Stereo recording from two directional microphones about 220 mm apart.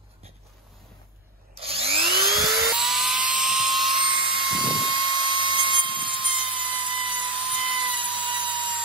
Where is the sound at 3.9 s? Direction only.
20° right (ahead or behind).